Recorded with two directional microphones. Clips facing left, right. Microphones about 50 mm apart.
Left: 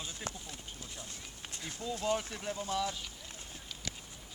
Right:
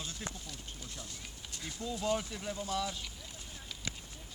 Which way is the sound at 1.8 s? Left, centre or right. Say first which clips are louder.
Even; centre.